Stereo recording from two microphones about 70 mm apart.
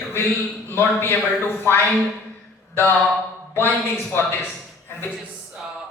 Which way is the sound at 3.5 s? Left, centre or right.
Left.